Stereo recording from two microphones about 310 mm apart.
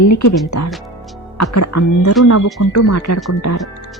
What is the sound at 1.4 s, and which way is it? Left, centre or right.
Speech, left.